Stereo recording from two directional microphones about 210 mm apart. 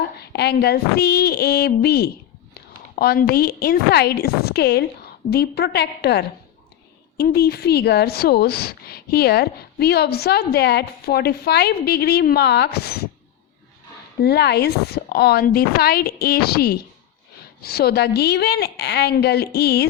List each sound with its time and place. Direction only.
0.2 s speech: 50° left (ahead or behind)
14.2 s speech: 50° left (ahead or behind)